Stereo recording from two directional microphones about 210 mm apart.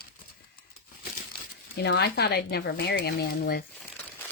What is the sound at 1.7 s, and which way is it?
Speech, 50° left (ahead or behind).